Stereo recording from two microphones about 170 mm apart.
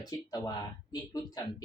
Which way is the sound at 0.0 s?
25° left (ahead or behind).